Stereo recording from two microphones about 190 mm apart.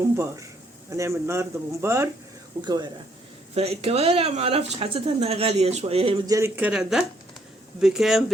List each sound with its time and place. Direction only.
0.9 s speech: 15° right (ahead or behind)
3.5 s speech: 35° right (ahead or behind)
6.2 s speech: 15° right (ahead or behind)